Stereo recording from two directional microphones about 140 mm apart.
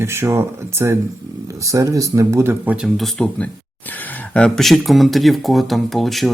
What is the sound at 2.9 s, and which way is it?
Speech, centre (ahead or behind).